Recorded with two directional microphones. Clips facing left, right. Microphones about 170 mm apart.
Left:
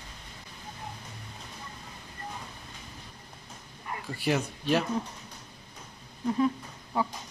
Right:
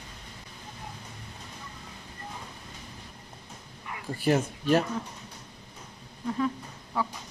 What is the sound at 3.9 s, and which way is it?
Cat, 40° left (ahead or behind).